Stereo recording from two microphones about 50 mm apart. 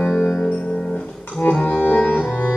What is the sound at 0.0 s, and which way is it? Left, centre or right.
Music, centre.